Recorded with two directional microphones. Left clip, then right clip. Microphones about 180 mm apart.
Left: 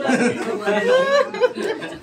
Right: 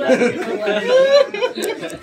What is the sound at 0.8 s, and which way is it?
Speech, 25° left (ahead or behind).